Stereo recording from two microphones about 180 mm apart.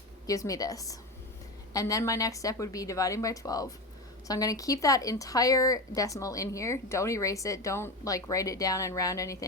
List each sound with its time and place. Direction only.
0.3 s speech: 20° left (ahead or behind)